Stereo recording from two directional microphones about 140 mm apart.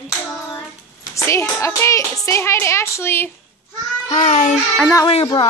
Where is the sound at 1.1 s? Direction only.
20° left (ahead or behind).